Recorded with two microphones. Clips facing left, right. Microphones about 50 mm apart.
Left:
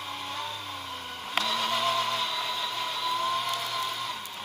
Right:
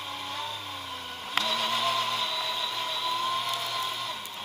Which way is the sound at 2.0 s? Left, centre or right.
Left.